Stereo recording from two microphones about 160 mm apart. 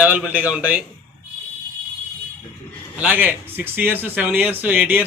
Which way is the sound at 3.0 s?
10° right (ahead or behind).